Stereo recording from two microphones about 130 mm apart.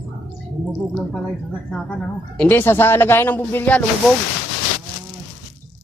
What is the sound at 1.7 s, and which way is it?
Speech, 5° left (ahead or behind).